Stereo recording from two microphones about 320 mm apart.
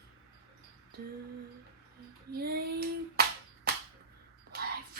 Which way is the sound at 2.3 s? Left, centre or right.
Right.